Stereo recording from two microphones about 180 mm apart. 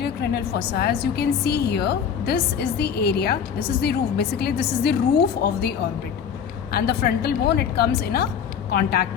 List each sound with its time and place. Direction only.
0.0 s a woman's voice: 65° left (ahead or behind)